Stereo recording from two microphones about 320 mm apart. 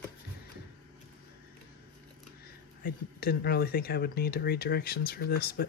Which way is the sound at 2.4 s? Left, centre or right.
Left.